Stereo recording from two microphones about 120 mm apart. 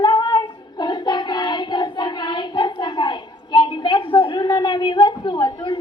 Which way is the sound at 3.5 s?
40° left (ahead or behind).